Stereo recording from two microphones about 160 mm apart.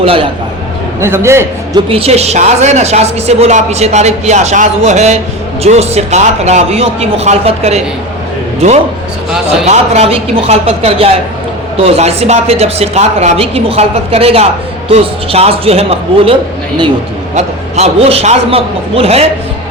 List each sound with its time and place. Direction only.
0.0 s a woman's voice: 35° right (ahead or behind)
1.0 s a man's voice: 15° right (ahead or behind)
1.9 s a woman's voice: 40° right (ahead or behind)
9.6 s a woman's voice: 40° right (ahead or behind)
17.3 s a woman's voice: 45° right (ahead or behind)